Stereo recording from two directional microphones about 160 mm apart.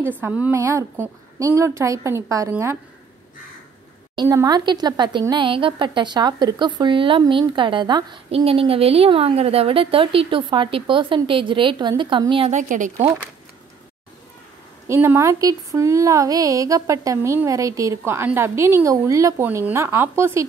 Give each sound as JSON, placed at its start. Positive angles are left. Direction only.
{"t": 0.2, "sound": "a woman's voice", "side_deg": -10}
{"t": 4.1, "sound": "speech", "side_deg": -25}
{"t": 12.4, "sound": "a woman's voice", "side_deg": -50}
{"t": 14.9, "sound": "speech", "side_deg": -15}